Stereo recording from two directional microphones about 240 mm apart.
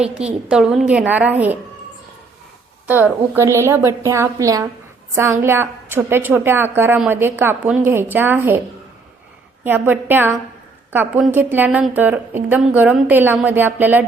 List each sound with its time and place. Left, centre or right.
0.0 s a woman's voice: centre
2.8 s a woman's voice: centre
9.6 s a woman's voice: centre